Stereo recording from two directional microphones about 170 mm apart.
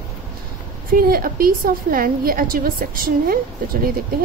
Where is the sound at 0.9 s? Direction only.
60° right (ahead or behind).